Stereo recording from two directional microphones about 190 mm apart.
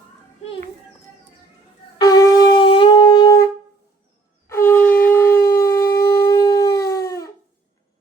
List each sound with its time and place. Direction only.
2.0 s shofar: 20° left (ahead or behind)
6.2 s howl: 20° left (ahead or behind)